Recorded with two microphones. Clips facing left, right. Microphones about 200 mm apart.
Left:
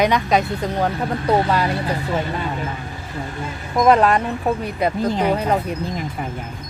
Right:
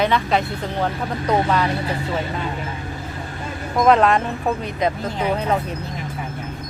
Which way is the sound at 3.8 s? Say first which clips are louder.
Even; 5° left (ahead or behind).